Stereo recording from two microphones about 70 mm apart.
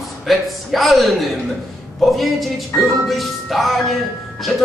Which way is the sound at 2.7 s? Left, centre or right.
Left.